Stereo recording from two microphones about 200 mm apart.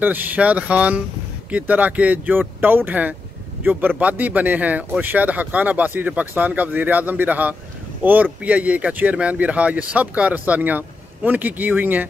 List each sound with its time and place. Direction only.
0.0 s speech: 10° right (ahead or behind)